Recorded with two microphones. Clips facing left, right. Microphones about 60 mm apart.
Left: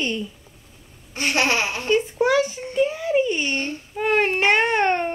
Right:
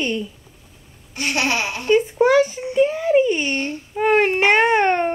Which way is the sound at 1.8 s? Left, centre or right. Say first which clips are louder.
Right 5 dB; right.